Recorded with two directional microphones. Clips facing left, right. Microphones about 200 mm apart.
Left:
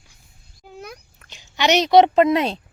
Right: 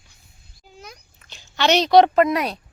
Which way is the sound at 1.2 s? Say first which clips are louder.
Even; 15° left (ahead or behind).